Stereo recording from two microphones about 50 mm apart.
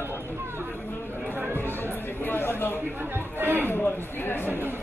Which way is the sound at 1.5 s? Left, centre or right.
Left.